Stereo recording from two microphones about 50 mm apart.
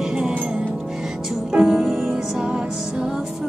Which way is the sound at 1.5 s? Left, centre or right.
Centre.